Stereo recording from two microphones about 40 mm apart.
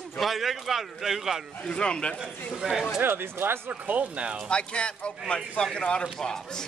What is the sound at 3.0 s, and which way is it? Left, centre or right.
Speech, right.